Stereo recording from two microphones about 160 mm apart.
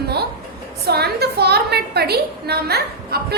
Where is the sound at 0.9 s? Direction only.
90° right.